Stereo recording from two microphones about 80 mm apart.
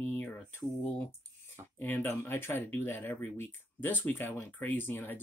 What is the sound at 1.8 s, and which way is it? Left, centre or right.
Speech, left.